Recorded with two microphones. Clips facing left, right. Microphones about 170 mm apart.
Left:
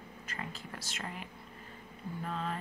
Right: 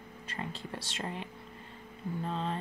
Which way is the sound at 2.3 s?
30° right (ahead or behind).